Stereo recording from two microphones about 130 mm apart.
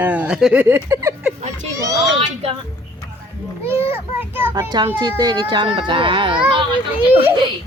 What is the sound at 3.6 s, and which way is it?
A woman's voice, 20° right (ahead or behind).